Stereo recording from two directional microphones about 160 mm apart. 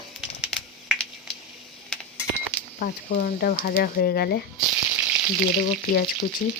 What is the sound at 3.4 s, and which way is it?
Speech, 70° left (ahead or behind).